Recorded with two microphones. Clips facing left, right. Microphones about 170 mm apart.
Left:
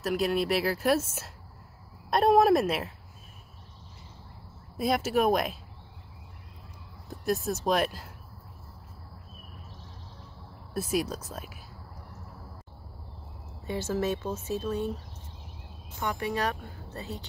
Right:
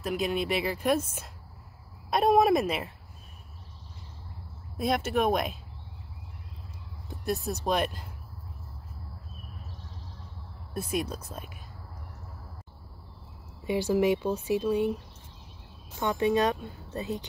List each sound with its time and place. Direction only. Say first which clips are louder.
0.0 s speech: left 2 dB; centre (ahead or behind)
4.7 s speech: left 1 dB; centre (ahead or behind)
7.1 s speech: left 2 dB; centre (ahead or behind)
10.7 s speech: left 2 dB; 5° left (ahead or behind)
13.7 s speech: right 5 dB; 15° right (ahead or behind)
16.0 s speech: right 5 dB; 20° right (ahead or behind)